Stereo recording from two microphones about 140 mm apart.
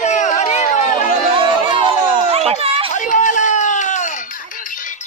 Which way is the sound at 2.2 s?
45° right (ahead or behind).